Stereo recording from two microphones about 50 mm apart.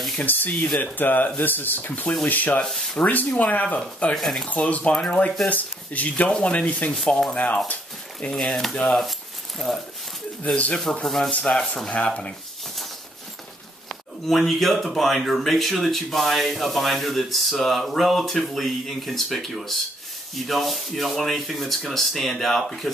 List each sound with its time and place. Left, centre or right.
0.2 s speech: left
2.6 s speech: centre
3.0 s speech: left
4.1 s speech: centre
4.5 s speech: left
6.3 s speech: left
7.3 s speech: left
8.4 s speech: centre
10.5 s speech: centre
10.8 s speech: centre
11.9 s speech: left
13.8 s speech: centre